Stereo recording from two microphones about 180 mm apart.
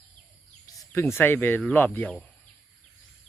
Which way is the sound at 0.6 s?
20° left (ahead or behind).